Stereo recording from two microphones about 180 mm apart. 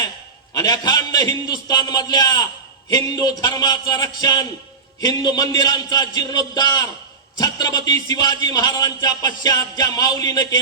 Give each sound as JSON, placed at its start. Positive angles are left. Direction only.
{"t": 0.5, "sound": "a man's voice", "side_deg": 20}